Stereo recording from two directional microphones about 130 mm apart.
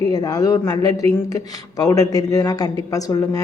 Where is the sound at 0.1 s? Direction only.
30° left (ahead or behind).